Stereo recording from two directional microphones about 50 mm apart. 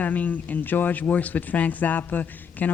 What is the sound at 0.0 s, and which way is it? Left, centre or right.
Speech, left.